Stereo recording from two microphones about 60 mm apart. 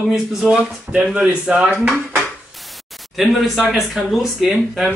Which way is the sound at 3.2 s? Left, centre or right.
Centre.